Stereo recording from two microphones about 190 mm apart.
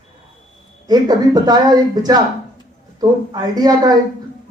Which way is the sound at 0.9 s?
20° right (ahead or behind).